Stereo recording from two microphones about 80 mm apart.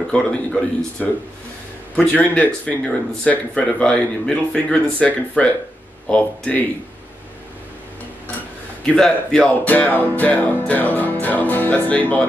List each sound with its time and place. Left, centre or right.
0.1 s speech: centre
8.8 s speech: centre